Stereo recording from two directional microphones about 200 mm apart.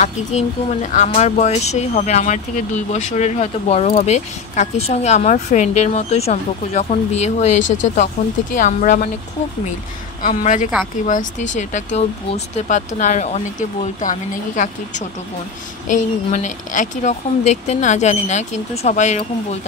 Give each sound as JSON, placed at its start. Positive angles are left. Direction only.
{"t": 0.0, "sound": "speech", "side_deg": 35}
{"t": 7.6, "sound": "speech", "side_deg": 70}
{"t": 8.2, "sound": "speech", "side_deg": 40}
{"t": 10.2, "sound": "speech", "side_deg": 40}